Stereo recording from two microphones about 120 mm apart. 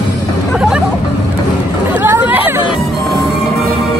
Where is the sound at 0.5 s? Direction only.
Centre (ahead or behind).